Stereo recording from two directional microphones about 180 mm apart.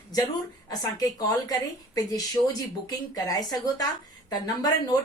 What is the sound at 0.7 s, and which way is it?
Speech, 20° left (ahead or behind).